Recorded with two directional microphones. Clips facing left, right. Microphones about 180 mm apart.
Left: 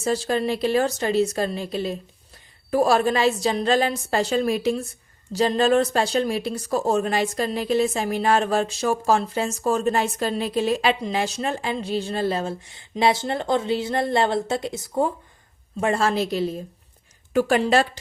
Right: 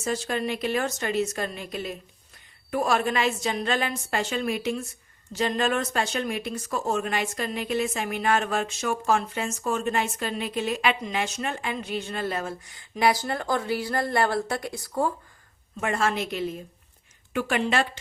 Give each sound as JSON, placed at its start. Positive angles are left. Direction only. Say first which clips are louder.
{"t": 0.0, "sound": "speech", "louder": "left 5 dB", "side_deg": 35}
{"t": 15.8, "sound": "speech", "louder": "left 5 dB", "side_deg": 35}